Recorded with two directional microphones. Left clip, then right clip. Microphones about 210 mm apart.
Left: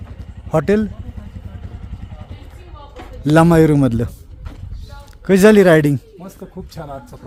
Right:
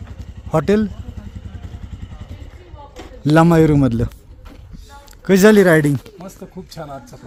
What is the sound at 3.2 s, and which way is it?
Speech, centre (ahead or behind).